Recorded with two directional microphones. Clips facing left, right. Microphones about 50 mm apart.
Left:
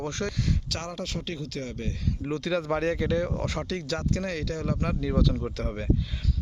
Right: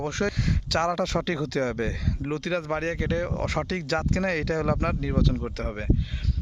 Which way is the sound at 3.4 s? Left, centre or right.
Right.